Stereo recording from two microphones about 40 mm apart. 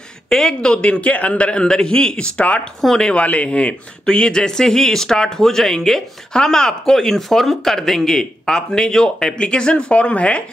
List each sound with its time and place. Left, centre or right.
0.3 s a man's voice: centre; by 10.4 s left